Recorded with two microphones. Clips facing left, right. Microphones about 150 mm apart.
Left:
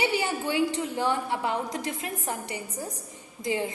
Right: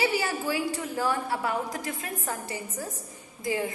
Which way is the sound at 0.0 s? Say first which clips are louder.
Even; 20° left (ahead or behind).